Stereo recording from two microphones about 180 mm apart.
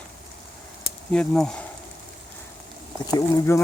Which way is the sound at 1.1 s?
5° left (ahead or behind).